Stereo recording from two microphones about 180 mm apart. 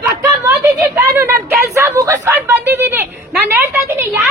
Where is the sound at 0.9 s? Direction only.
15° right (ahead or behind).